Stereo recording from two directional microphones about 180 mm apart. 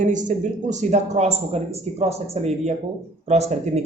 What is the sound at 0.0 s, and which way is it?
A man's voice, 45° right (ahead or behind).